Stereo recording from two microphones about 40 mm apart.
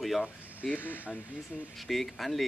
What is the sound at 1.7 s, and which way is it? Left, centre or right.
Speech, centre.